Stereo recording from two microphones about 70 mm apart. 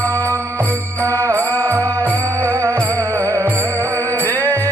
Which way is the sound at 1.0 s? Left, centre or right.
Right.